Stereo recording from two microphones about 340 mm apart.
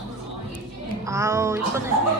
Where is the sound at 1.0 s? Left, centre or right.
Centre.